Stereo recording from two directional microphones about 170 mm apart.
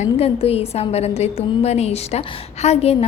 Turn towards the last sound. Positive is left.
turn(degrees=40)  # may be behind; listen again after turning